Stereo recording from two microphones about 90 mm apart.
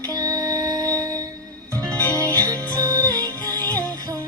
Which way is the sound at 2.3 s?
45° right (ahead or behind).